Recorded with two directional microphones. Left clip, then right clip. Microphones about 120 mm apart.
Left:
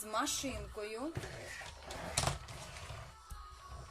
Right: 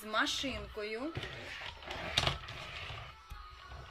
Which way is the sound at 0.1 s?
20° left (ahead or behind).